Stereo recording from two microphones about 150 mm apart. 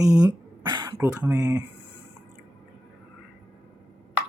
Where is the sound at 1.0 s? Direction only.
10° right (ahead or behind).